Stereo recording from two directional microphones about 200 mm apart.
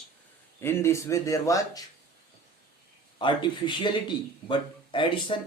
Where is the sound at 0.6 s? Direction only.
10° left (ahead or behind).